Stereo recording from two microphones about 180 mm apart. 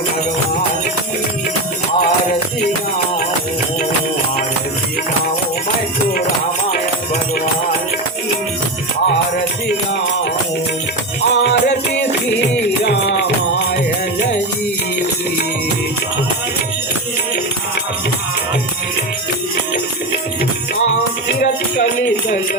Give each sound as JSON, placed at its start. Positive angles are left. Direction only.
{"t": 11.3, "sound": "music", "side_deg": 75}